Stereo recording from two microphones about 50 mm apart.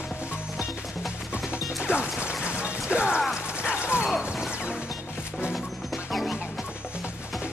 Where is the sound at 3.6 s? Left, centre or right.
Right.